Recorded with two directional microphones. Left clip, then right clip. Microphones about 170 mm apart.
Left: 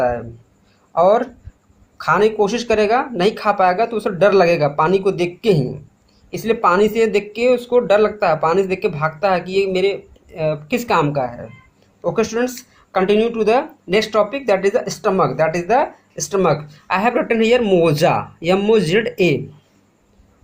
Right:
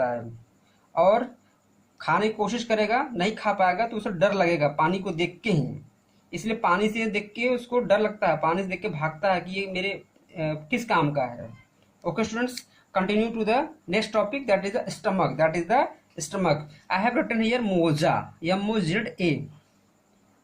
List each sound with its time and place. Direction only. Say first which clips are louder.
0.9 s speech: left 7 dB; 50° left (ahead or behind)